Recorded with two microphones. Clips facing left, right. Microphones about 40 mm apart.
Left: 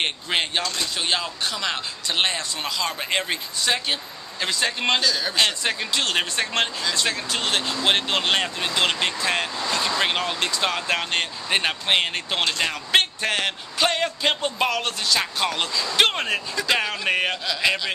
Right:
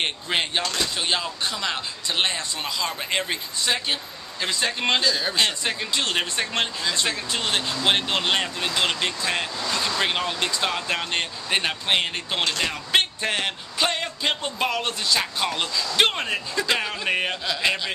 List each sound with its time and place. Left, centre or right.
0.0 s speech: centre
5.0 s a man's voice: centre
5.4 s speech: centre
6.8 s speech: centre
7.3 s speech: centre
14.7 s speech: centre
15.1 s speech: centre